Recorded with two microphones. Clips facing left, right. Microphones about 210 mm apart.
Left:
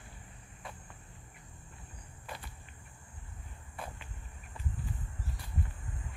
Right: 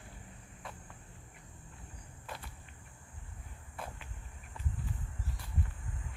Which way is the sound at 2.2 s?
Centre (ahead or behind).